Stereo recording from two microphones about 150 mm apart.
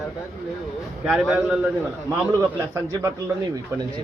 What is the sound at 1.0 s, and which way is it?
Speech, 5° right (ahead or behind).